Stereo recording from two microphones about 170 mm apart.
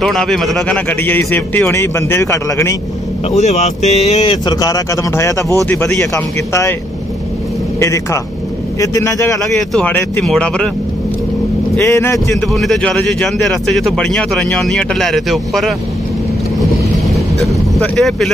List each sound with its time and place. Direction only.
0.0 s speech: 5° left (ahead or behind)
3.3 s speech: 40° left (ahead or behind); by 6.7 s 15° left (ahead or behind)
7.8 s speech: 15° left (ahead or behind)
11.7 s speech: 15° left (ahead or behind)
12.4 s speech: centre (ahead or behind)
17.0 s vehicle: centre (ahead or behind)